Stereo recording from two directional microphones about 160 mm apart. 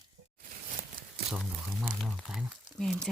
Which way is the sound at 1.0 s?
65° right (ahead or behind).